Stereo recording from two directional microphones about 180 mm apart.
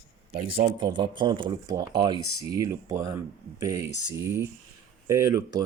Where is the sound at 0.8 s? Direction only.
25° right (ahead or behind).